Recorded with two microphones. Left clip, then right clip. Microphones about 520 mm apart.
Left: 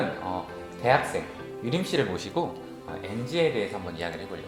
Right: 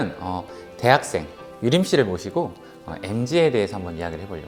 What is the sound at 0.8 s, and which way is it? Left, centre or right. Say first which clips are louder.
Speech: right 5 dB; right.